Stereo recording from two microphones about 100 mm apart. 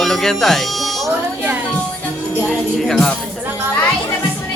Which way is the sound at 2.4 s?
5° left (ahead or behind).